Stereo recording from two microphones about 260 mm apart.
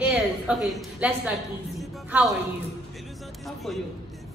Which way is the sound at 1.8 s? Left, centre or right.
Centre.